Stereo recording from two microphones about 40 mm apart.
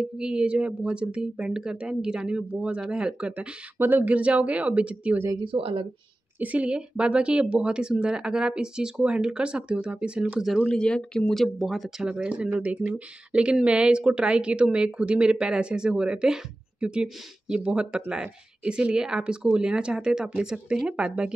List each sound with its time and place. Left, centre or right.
0.2 s speech: right
3.2 s speech: right
3.7 s speech: right
4.0 s speech: right
6.4 s speech: right
10.8 s speech: left
11.2 s speech: centre
12.1 s speech: right
12.5 s speech: right
13.3 s speech: right